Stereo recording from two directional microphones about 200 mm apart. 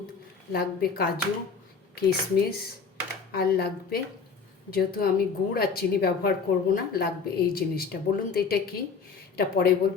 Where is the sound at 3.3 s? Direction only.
50° left (ahead or behind).